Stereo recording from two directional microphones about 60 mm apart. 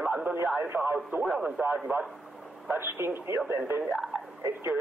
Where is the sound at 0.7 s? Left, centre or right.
Right.